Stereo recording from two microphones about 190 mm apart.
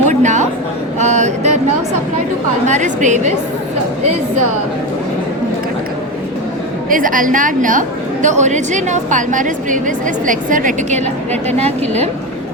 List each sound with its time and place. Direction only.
0.1 s a sound: 40° right (ahead or behind)
2.6 s a woman's voice: 40° right (ahead or behind)
6.9 s a woman's voice: 45° right (ahead or behind)